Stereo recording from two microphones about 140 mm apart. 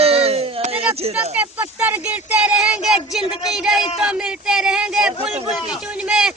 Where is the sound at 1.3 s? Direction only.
15° right (ahead or behind).